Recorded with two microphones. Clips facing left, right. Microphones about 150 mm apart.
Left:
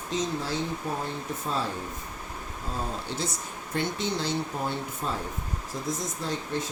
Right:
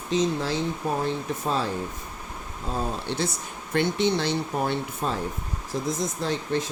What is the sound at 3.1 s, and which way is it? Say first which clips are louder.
Speech: right 4 dB; 70° right (ahead or behind).